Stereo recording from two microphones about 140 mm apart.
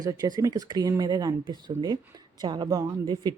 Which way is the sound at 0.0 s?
25° right (ahead or behind).